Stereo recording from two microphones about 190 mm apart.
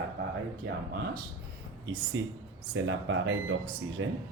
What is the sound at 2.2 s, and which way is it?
A man's voice, 80° right.